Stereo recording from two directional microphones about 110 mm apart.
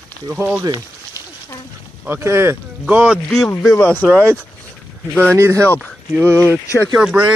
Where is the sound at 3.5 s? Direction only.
30° left (ahead or behind).